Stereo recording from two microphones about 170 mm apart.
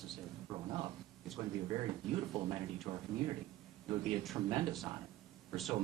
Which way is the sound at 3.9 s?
Centre (ahead or behind).